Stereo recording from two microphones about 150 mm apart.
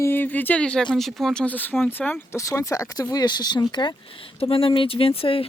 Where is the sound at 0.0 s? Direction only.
15° left (ahead or behind).